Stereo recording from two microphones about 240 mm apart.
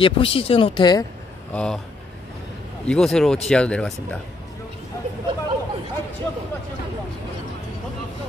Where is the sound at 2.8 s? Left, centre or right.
Centre.